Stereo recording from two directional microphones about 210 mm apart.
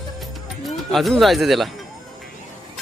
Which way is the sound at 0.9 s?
Centre (ahead or behind).